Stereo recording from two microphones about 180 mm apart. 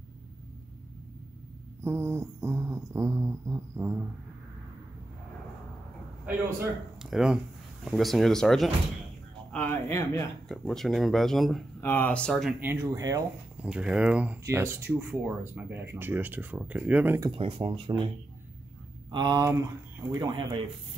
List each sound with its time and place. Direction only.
1.8 s a sound: 15° right (ahead or behind)
6.2 s speech: 5° right (ahead or behind)
13.6 s speech: 5° right (ahead or behind)
17.3 s speech: 30° right (ahead or behind)
19.0 s speech: 25° right (ahead or behind)